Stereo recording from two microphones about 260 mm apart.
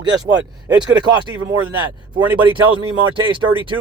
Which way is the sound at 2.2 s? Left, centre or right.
Centre.